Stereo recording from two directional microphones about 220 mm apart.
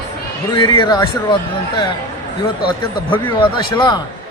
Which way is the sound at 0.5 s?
20° left (ahead or behind).